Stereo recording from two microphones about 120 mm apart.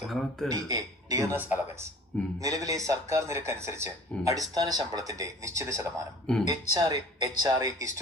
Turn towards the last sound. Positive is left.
turn(degrees=-25)  # may be behind; listen again after turning